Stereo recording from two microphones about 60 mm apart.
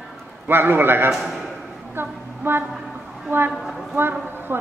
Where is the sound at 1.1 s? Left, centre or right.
Centre.